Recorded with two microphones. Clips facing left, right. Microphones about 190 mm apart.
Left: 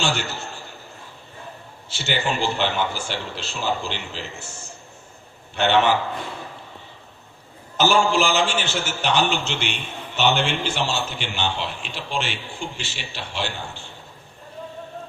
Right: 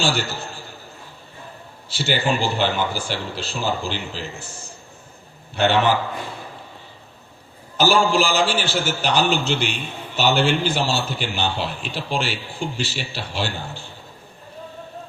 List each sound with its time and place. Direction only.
0.0 s a man's voice: 35° right (ahead or behind)
2.0 s a man's voice: 35° right (ahead or behind)
7.8 s a man's voice: 35° right (ahead or behind)